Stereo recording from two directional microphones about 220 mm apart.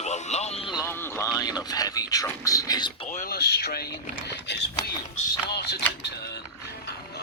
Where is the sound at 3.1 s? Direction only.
40° left (ahead or behind).